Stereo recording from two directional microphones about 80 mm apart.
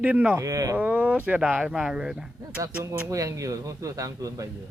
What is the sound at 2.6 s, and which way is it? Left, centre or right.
A man's voice, right.